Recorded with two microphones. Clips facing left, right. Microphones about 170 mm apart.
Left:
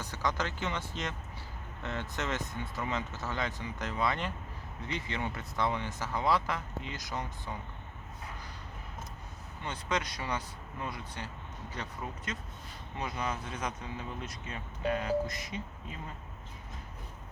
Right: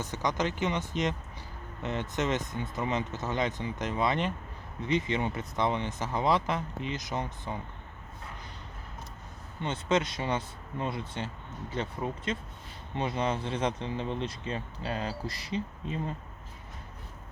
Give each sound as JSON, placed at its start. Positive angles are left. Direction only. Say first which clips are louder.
{"t": 0.0, "sound": "speech", "louder": "right 4 dB", "side_deg": -20}
{"t": 9.6, "sound": "speech", "louder": "right 6 dB", "side_deg": -25}